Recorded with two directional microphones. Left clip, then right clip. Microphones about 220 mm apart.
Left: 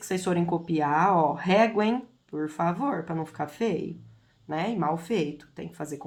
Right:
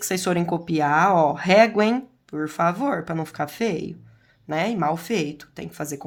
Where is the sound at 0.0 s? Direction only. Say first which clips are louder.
Right 4 dB; 35° right (ahead or behind).